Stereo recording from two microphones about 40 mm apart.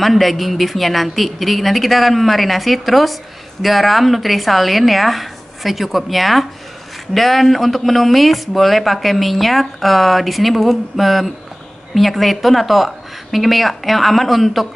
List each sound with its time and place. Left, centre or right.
0.0 s a man's voice: centre